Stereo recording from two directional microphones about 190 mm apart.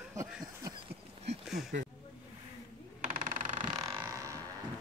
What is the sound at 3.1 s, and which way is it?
Sewing machine, 40° right (ahead or behind).